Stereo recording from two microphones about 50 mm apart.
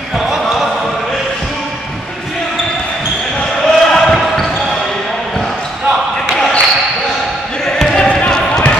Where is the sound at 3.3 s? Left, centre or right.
Centre.